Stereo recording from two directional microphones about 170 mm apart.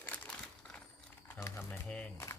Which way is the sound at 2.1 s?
20° left (ahead or behind).